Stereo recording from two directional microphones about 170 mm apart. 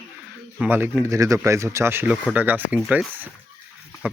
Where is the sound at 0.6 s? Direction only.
10° right (ahead or behind).